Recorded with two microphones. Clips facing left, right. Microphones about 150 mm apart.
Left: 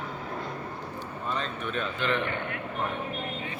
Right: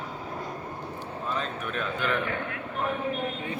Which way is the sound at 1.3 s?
5° right (ahead or behind).